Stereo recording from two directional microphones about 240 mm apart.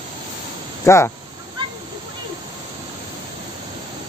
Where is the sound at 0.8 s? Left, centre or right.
Centre.